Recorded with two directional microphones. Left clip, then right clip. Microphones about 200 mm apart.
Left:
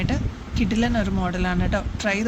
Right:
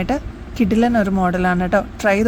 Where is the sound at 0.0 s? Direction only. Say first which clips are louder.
Right 6 dB; 50° right (ahead or behind).